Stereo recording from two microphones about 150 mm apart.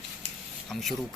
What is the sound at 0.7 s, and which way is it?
Speech, centre (ahead or behind).